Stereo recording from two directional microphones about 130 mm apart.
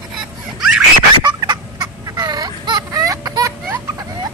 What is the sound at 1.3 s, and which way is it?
Fowl, 35° right (ahead or behind).